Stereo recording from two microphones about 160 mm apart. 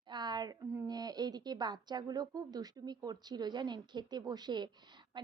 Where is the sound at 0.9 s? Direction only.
25° right (ahead or behind).